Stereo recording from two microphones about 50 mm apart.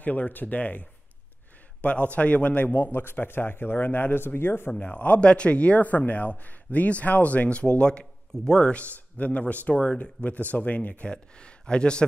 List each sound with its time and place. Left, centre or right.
0.0 s a man's voice: left
4.7 s a man's voice: left
11.1 s a man's voice: centre